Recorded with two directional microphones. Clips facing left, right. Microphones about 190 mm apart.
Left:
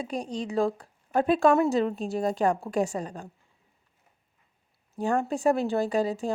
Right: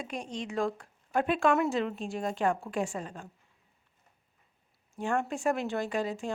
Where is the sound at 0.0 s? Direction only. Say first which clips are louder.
Left 5 dB; 35° left (ahead or behind).